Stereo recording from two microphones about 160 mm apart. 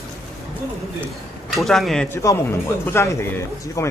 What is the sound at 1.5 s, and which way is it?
Speech, centre (ahead or behind).